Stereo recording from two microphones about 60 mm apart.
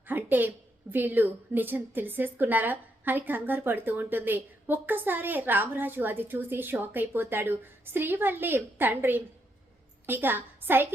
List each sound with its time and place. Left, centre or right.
0.0 s a woman's voice: right